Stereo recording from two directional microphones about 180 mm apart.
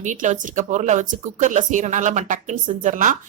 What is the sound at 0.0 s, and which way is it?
Speech, 45° right (ahead or behind).